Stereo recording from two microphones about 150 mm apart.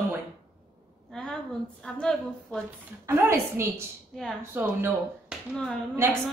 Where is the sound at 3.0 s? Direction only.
20° right (ahead or behind).